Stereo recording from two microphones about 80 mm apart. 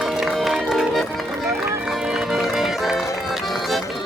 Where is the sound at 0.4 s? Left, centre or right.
Centre.